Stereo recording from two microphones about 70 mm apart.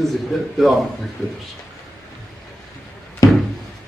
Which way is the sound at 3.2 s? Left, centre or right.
Left.